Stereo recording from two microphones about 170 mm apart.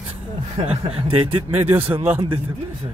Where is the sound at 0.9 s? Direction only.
35° right (ahead or behind).